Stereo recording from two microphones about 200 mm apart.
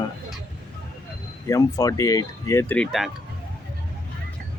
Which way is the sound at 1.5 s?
15° left (ahead or behind).